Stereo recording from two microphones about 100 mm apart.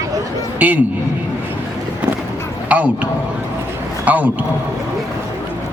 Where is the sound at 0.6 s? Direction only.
15° right (ahead or behind).